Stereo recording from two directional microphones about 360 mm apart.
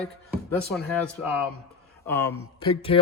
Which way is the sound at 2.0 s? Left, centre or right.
Centre.